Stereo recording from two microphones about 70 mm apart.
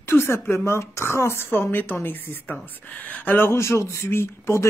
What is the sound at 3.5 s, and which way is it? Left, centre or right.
Speech, left.